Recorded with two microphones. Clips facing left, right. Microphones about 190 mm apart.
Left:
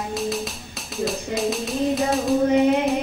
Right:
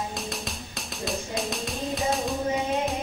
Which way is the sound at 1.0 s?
Centre (ahead or behind).